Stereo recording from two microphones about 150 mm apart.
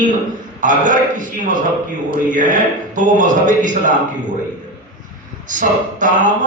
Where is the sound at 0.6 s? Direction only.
60° right (ahead or behind).